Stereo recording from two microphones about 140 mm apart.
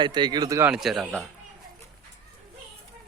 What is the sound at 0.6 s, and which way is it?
Speech, 5° right (ahead or behind).